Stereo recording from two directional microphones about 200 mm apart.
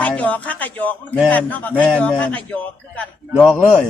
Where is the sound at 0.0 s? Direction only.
5° left (ahead or behind).